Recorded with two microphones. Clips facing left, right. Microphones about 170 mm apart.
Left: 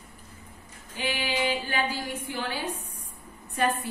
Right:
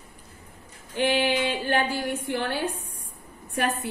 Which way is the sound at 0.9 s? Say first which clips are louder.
Right 7 dB; 65° right (ahead or behind).